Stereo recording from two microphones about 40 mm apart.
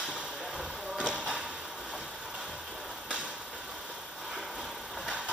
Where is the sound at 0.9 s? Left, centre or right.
Right.